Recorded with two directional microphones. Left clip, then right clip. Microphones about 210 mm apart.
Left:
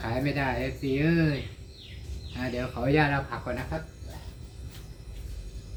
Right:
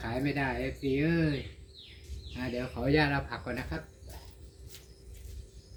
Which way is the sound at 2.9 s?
25° right (ahead or behind).